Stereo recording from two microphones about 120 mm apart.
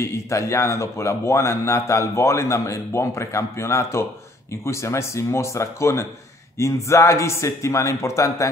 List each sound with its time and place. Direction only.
0.0 s speech: 25° left (ahead or behind)